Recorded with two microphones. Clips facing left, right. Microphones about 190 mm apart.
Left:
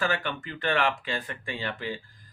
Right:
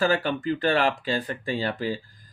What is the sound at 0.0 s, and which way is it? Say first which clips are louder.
Speech: right 6 dB; 35° right (ahead or behind).